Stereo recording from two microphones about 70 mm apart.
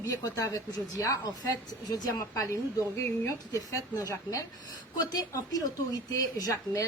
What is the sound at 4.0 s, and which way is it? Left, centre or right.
Speech, left.